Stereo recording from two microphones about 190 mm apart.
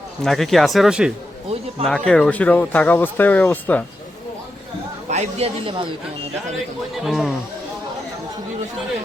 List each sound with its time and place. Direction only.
0.2 s speech: centre (ahead or behind)
5.0 s speech: 35° right (ahead or behind)
6.9 s speech: centre (ahead or behind)